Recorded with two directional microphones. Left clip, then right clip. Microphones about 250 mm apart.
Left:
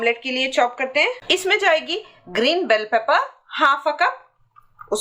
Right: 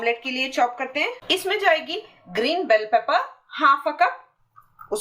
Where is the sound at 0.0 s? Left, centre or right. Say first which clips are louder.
Left 3 dB; centre.